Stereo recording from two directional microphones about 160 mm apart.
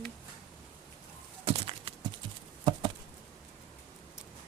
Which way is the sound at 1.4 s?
35° right (ahead or behind).